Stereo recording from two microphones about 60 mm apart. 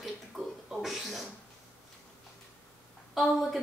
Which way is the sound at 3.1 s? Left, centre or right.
Centre.